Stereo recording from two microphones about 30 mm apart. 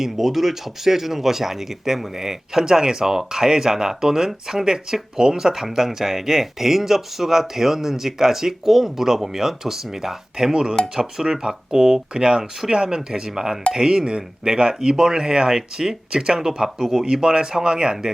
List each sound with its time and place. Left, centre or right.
0.0 s speech: centre
10.4 s speech: right
12.1 s speech: right